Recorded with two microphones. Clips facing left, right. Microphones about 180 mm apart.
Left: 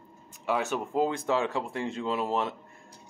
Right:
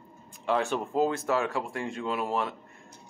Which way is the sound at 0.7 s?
10° left (ahead or behind).